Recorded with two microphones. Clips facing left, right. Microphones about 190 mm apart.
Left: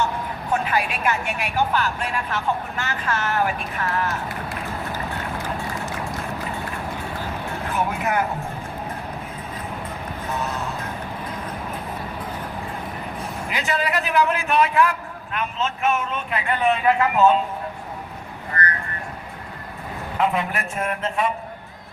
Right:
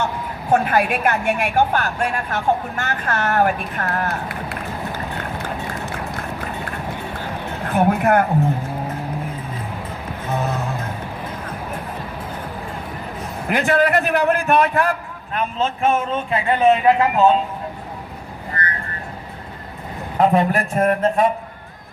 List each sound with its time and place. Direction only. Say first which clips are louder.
0.5 s a man's voice: right 6 dB; 50° right (ahead or behind)
7.7 s speech: right 8 dB; 55° right (ahead or behind)
13.5 s a man's voice: right 8 dB; 55° right (ahead or behind); by 17.3 s 30° right (ahead or behind)
18.5 s vehicle: left 2 dB; 20° right (ahead or behind)
20.1 s a man's voice: right 7 dB; 40° right (ahead or behind)